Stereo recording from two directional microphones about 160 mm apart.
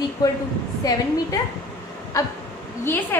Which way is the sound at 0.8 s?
20° left (ahead or behind).